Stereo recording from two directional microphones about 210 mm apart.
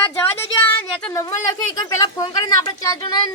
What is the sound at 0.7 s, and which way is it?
Speech, 10° left (ahead or behind).